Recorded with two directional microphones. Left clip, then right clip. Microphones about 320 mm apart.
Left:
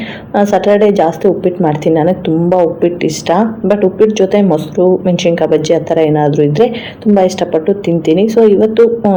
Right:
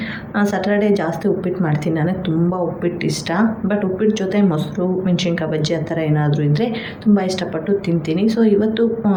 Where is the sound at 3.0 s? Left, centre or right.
Centre.